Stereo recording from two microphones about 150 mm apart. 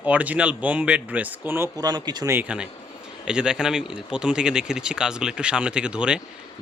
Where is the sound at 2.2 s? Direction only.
10° right (ahead or behind).